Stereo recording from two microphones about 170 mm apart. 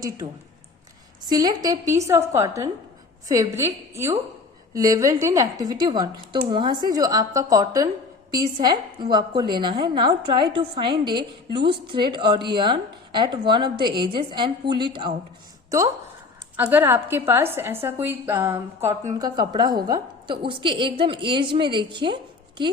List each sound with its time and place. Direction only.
1.3 s a woman's voice: 25° right (ahead or behind)
16.6 s a woman's voice: 10° right (ahead or behind); by 22.7 s 30° right (ahead or behind)